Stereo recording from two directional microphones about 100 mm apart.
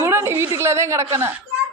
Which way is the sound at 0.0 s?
25° right (ahead or behind).